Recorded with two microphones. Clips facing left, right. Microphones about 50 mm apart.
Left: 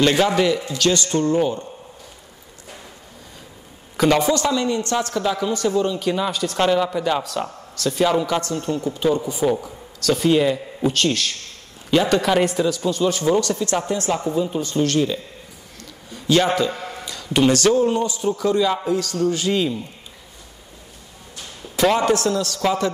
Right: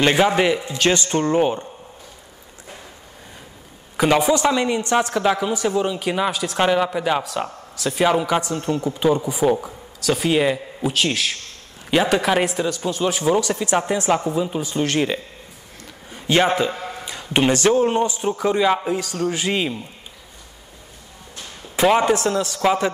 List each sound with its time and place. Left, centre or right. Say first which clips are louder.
0.0 s a man's voice: even; right
3.9 s a man's voice: even; centre
5.5 s speech: left 1 dB; centre
6.3 s speech: left 1 dB; centre
6.6 s a man's voice: even; centre
15.8 s a sound: even; right
16.7 s a sound: right 1 dB; centre
17.0 s a man's voice: left 1 dB; right
21.9 s a man's voice: right 1 dB; right